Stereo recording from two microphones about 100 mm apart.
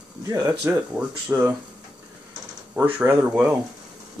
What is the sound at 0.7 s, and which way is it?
Speech, 25° right (ahead or behind).